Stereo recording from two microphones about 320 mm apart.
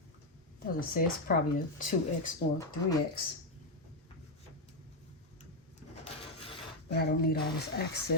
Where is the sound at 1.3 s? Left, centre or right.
Left.